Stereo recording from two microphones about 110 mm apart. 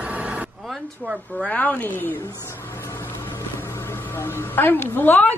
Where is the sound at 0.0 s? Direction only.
10° right (ahead or behind).